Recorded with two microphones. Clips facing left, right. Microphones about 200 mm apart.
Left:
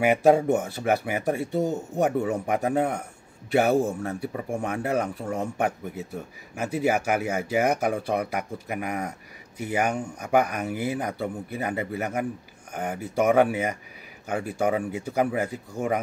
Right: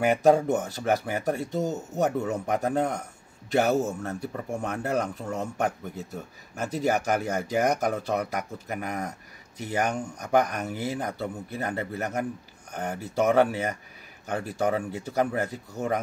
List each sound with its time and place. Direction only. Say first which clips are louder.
0.0 s a man's voice: left 1 dB; 10° left (ahead or behind)